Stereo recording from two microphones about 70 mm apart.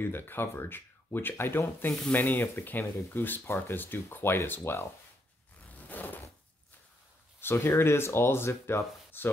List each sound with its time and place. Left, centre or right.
0.0 s speech: left
5.8 s a sound: left
7.3 s speech: left